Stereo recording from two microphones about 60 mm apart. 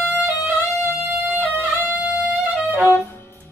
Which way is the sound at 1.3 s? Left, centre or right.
Right.